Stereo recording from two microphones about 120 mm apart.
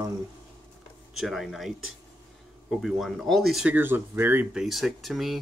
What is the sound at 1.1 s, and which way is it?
Speech, centre (ahead or behind).